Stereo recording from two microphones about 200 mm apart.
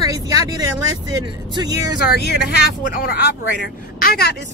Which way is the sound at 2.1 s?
55° left (ahead or behind).